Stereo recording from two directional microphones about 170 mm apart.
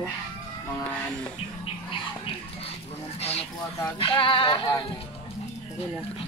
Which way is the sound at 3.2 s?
35° left (ahead or behind).